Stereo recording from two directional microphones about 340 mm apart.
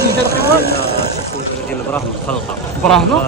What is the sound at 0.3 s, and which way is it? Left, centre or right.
Speech, left.